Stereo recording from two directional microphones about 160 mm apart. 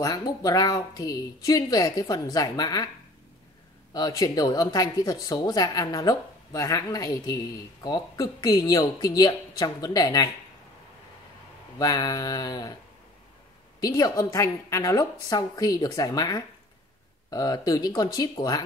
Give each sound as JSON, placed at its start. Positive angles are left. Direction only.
{"t": 0.0, "sound": "speech", "side_deg": 20}
{"t": 3.9, "sound": "speech", "side_deg": 25}
{"t": 11.8, "sound": "speech", "side_deg": 20}
{"t": 13.7, "sound": "speech", "side_deg": 25}